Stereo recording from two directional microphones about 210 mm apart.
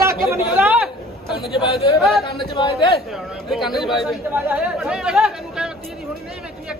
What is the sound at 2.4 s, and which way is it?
Speech, 25° left (ahead or behind).